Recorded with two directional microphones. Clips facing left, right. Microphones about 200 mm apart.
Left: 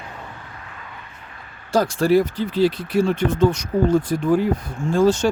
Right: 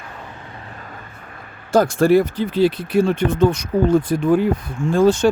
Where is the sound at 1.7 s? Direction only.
50° right (ahead or behind).